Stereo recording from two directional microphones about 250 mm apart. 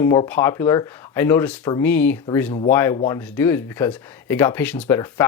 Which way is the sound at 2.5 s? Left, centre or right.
Left.